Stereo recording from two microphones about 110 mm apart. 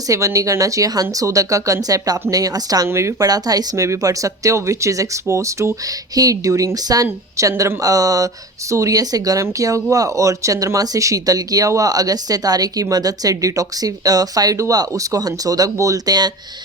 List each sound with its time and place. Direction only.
0.1 s speech: 30° right (ahead or behind)